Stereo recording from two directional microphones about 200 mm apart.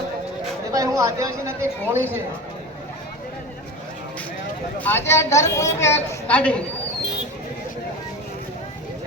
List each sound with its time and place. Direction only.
0.7 s a woman's voice: 15° right (ahead or behind)
4.8 s a woman's voice: 10° left (ahead or behind)